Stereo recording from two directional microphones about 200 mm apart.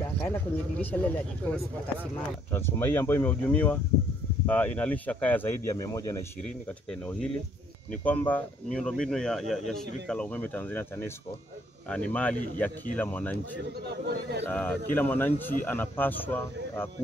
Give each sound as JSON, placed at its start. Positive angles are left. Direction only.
{"t": 0.0, "sound": "speech", "side_deg": 10}
{"t": 2.5, "sound": "speech", "side_deg": 10}
{"t": 6.9, "sound": "speech", "side_deg": 5}
{"t": 11.9, "sound": "speech", "side_deg": 5}
{"t": 13.8, "sound": "speech", "side_deg": -55}
{"t": 14.5, "sound": "speech", "side_deg": 10}